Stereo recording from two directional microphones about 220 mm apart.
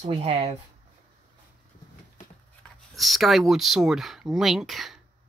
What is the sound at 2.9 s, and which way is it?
Speech, centre (ahead or behind).